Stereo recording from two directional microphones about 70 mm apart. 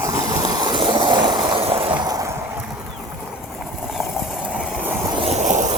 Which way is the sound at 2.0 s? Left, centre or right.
Right.